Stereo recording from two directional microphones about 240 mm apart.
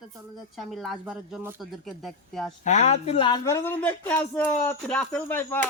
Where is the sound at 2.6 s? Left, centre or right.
Left.